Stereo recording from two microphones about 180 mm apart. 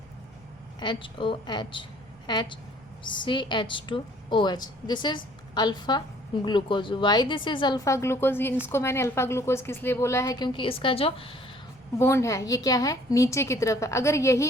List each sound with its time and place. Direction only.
0.8 s a woman's voice: 25° left (ahead or behind)
11.9 s a woman's voice: 15° left (ahead or behind)